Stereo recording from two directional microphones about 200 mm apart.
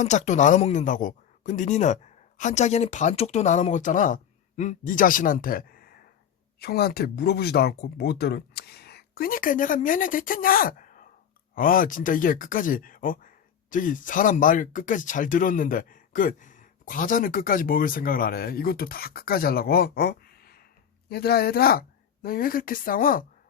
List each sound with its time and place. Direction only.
0.0 s speech: 35° left (ahead or behind)